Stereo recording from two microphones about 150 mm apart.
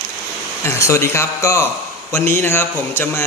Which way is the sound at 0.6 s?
20° left (ahead or behind).